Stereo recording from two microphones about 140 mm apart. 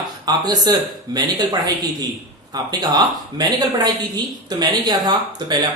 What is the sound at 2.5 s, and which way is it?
Speech, 30° right (ahead or behind).